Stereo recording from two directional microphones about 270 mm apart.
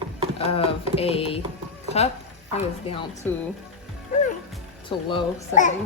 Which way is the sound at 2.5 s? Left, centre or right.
Left.